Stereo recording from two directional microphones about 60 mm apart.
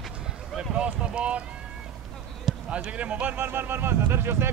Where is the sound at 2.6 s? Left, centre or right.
Right.